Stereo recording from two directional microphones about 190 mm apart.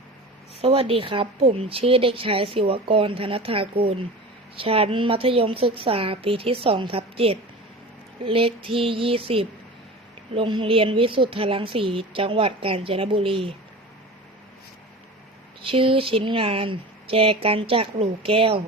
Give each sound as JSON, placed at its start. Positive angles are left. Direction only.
{"t": 0.6, "sound": "a woman's voice", "side_deg": -30}
{"t": 15.6, "sound": "a woman's voice", "side_deg": -30}